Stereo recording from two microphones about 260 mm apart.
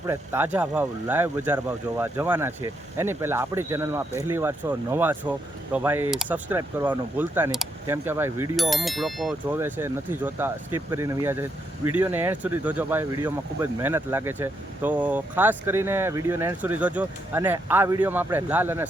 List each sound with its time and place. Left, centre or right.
0.1 s speech: centre